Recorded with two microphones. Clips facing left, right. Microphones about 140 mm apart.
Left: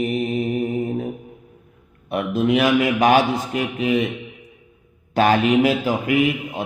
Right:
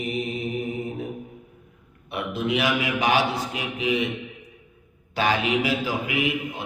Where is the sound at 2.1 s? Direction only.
50° left (ahead or behind).